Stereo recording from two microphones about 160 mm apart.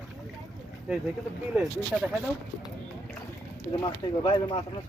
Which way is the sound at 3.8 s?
30° left (ahead or behind).